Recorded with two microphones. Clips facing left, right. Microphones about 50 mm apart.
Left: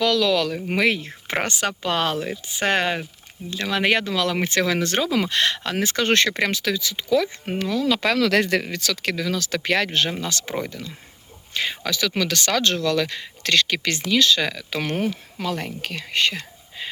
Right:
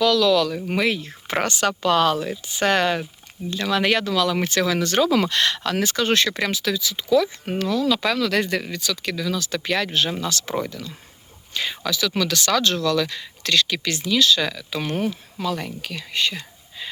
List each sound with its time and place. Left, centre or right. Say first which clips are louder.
0.0 s speech: right 2 dB; left
1.3 s speech: right 2 dB; left
5.0 s speech: right 3 dB; centre
5.3 s speech: right 1 dB; left
6.0 s speech: left 3 dB; left
8.1 s speech: left 2 dB; left
10.2 s speech: right 2 dB; left